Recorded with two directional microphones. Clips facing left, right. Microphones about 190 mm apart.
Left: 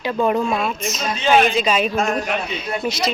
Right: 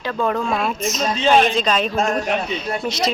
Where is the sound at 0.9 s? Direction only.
40° right (ahead or behind).